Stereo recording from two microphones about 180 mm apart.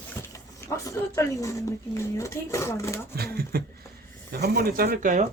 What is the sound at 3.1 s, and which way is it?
Speech, 60° right (ahead or behind).